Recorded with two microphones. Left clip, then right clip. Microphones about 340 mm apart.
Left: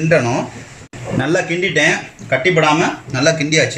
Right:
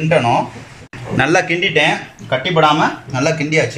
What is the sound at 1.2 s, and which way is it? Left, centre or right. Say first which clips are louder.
Speech: right 3 dB; right.